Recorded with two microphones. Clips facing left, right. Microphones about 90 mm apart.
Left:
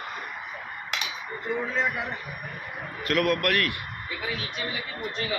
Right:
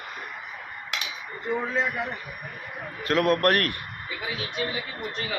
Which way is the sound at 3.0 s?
30° right (ahead or behind).